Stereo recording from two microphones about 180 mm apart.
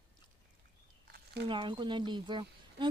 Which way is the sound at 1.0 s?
65° right (ahead or behind).